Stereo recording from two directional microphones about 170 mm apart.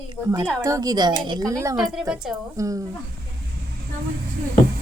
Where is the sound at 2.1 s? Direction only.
5° right (ahead or behind).